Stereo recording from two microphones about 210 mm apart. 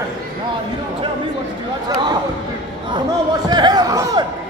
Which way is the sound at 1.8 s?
20° right (ahead or behind).